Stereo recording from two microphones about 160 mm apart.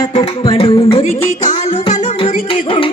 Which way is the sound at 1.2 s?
50° left (ahead or behind).